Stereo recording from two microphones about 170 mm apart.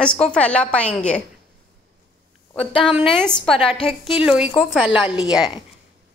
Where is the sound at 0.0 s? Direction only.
5° left (ahead or behind).